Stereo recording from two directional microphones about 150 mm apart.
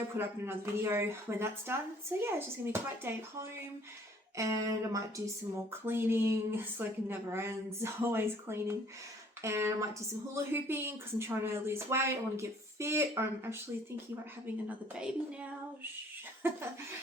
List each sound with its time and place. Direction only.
0.2 s speech: 15° right (ahead or behind)